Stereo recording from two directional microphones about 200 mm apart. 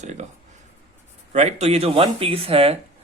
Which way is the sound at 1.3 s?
35° right (ahead or behind).